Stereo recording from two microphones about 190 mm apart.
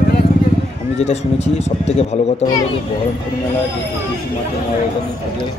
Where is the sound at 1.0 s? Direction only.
35° left (ahead or behind).